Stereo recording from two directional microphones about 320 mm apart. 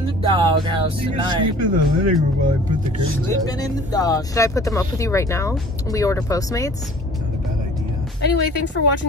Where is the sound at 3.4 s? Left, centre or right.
Centre.